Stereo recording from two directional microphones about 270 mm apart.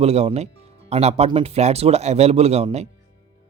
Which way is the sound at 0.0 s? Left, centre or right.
Right.